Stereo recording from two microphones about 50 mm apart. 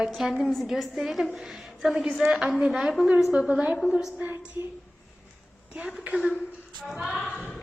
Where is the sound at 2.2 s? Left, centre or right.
Centre.